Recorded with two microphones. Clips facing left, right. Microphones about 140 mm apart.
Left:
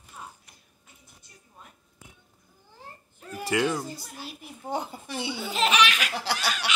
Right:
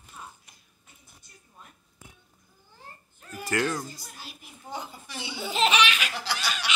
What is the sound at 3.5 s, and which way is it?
Speech, 10° left (ahead or behind).